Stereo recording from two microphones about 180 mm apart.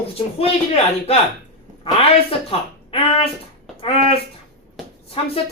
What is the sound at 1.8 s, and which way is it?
Speech, 30° left (ahead or behind).